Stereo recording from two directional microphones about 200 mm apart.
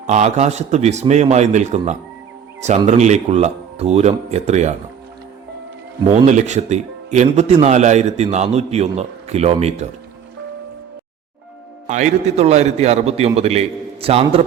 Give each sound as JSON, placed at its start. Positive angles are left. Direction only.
{"t": 0.1, "sound": "speech", "side_deg": -35}
{"t": 6.1, "sound": "speech", "side_deg": -35}
{"t": 11.9, "sound": "speech", "side_deg": -35}